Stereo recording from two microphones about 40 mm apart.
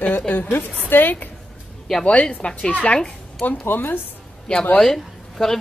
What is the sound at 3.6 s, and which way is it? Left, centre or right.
Speech, left.